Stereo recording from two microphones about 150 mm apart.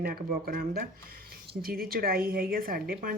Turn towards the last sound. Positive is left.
turn(degrees=-75)  # may be behind; listen again after turning